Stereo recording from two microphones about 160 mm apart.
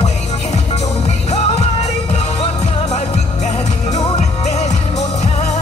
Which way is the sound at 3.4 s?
45° left (ahead or behind).